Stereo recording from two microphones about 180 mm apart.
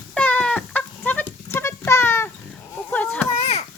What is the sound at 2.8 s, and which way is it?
Chop, 10° left (ahead or behind).